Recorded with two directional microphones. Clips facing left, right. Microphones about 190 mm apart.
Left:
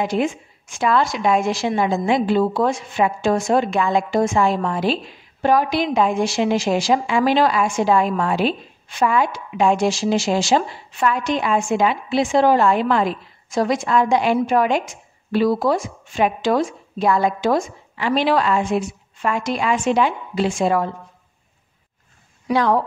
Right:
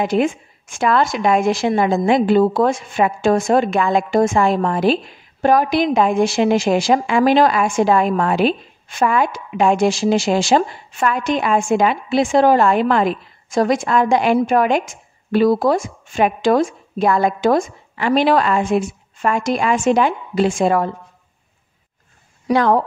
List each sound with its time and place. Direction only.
0.0 s a woman's voice: 55° right (ahead or behind)
22.5 s a woman's voice: 50° right (ahead or behind)